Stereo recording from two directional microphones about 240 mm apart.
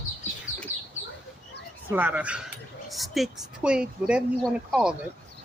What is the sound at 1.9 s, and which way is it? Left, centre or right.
Speech, centre.